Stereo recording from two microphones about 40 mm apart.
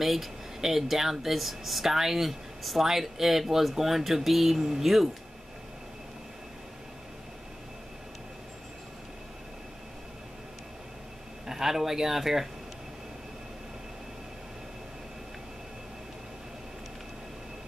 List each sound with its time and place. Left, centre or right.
0.0 s speech: centre
11.4 s speech: centre